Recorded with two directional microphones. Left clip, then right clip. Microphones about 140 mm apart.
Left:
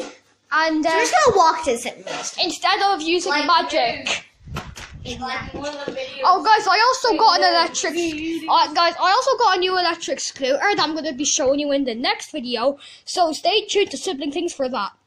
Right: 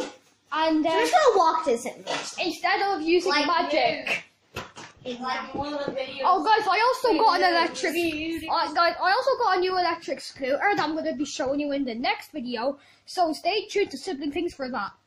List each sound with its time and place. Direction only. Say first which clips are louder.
0.5 s a woman's voice: left 5 dB; centre (ahead or behind)
0.9 s a woman's voice: left 4 dB; 10° left (ahead or behind)
6.2 s speech: left 6 dB; 5° left (ahead or behind)
7.2 s a woman's voice: left 6 dB; 15° right (ahead or behind)
8.5 s a woman's voice: left 6 dB; 10° left (ahead or behind)
12.4 s a woman's voice: left 7 dB; 5° left (ahead or behind)